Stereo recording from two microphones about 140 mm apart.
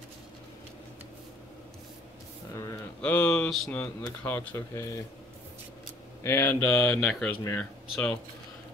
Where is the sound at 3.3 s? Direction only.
5° left (ahead or behind).